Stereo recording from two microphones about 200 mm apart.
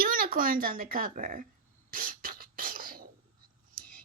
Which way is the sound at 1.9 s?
45° right (ahead or behind).